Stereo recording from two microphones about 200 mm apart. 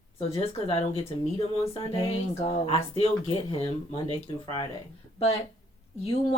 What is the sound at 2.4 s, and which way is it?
Speech, 30° left (ahead or behind).